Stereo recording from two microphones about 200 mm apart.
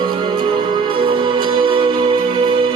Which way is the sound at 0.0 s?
25° right (ahead or behind).